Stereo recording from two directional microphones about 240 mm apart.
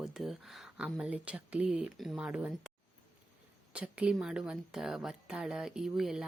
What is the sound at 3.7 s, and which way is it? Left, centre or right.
A woman's voice, centre.